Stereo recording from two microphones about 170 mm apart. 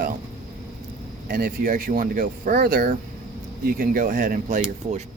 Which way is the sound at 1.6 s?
50° right (ahead or behind).